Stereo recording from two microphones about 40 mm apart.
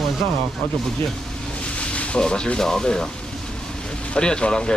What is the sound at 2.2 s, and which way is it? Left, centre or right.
Speech, left.